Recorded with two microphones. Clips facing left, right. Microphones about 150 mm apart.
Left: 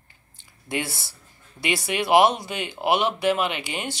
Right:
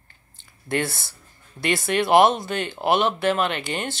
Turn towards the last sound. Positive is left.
turn(degrees=10)  # may be behind; listen again after turning